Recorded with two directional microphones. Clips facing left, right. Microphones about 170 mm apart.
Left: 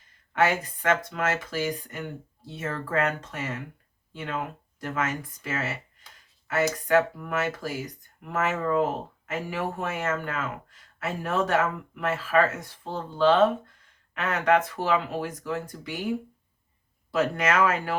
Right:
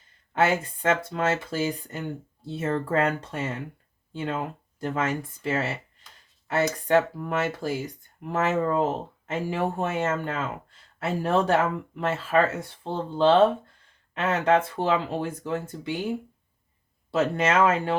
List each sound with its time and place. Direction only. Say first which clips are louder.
0.3 s speech: right 1 dB; 30° right (ahead or behind)
6.8 s speech: right 1 dB; 30° right (ahead or behind)
17.1 s speech: right 1 dB; 25° right (ahead or behind)